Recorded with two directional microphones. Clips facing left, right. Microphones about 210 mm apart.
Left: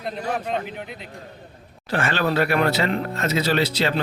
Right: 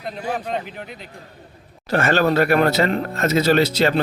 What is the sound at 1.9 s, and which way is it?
Speech, 45° right (ahead or behind).